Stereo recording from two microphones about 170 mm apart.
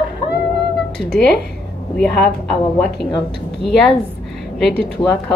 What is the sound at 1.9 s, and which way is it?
A woman's voice, 5° left (ahead or behind).